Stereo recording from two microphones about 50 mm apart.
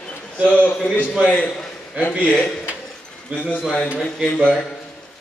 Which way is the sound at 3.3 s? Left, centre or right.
Left.